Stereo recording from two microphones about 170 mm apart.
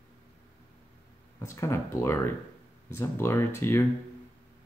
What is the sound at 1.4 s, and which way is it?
Speech, 15° left (ahead or behind).